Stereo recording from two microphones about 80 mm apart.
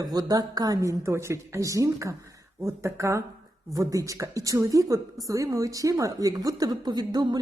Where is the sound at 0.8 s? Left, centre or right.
Right.